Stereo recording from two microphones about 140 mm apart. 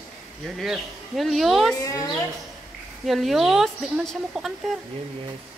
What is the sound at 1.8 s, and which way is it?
Speech, 25° left (ahead or behind).